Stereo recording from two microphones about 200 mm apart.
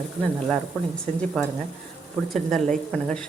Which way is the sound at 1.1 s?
5° left (ahead or behind).